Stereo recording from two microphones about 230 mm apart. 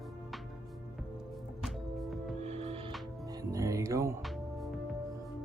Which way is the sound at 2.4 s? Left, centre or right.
Right.